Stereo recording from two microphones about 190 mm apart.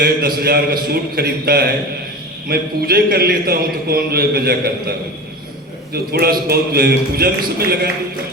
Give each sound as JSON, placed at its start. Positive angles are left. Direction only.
{"t": 0.0, "sound": "a man's voice", "side_deg": -55}